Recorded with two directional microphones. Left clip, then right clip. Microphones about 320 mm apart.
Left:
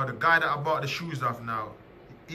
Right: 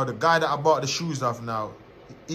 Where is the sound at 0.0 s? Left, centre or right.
Centre.